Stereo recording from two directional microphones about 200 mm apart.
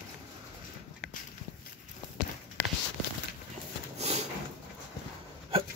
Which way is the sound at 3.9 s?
35° right (ahead or behind).